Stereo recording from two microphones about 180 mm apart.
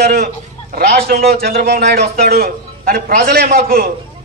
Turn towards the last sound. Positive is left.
turn(degrees=-55)  # may be behind; listen again after turning